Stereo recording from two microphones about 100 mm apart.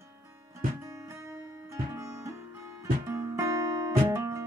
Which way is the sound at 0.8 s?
30° right (ahead or behind).